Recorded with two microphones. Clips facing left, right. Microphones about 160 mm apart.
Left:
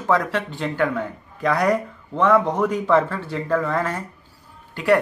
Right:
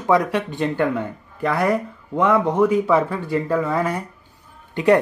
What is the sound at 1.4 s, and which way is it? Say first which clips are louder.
Speech: even; 5° right (ahead or behind).